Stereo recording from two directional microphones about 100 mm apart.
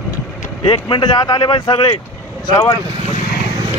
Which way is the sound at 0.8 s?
50° left (ahead or behind).